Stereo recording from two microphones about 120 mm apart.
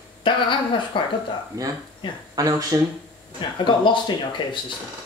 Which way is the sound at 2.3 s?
30° right (ahead or behind).